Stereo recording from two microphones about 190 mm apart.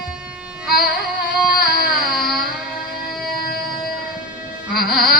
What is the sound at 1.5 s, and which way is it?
Music, 50° left (ahead or behind).